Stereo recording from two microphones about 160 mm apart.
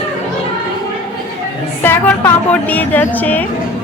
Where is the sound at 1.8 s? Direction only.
10° left (ahead or behind).